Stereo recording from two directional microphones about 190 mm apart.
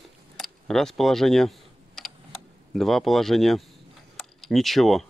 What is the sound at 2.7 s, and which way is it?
Speech, centre (ahead or behind).